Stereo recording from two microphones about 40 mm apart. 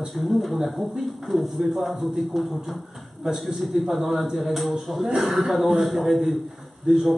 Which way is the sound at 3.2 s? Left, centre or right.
Centre.